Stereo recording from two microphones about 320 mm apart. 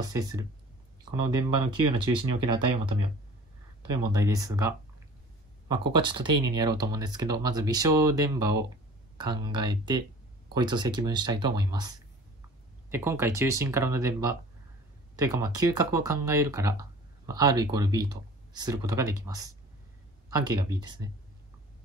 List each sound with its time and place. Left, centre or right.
0.0 s speech: centre
4.0 s speech: centre
12.9 s speech: centre